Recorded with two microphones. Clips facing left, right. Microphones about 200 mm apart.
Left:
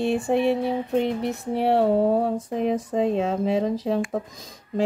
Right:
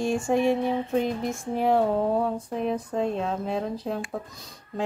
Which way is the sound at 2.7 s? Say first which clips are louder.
Left 4 dB; 90° left.